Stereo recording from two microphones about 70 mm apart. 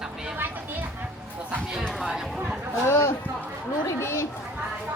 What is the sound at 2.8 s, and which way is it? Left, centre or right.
Speech, left.